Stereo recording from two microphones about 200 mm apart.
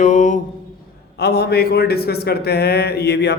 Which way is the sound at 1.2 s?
55° left (ahead or behind).